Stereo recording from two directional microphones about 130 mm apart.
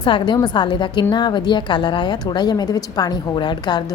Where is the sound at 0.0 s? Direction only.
40° left (ahead or behind).